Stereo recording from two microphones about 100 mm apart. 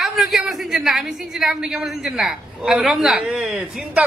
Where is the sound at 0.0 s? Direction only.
Centre (ahead or behind).